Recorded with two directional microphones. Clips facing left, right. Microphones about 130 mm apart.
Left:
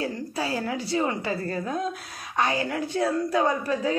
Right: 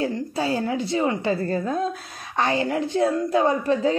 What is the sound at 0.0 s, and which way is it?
A woman's voice, 25° right (ahead or behind).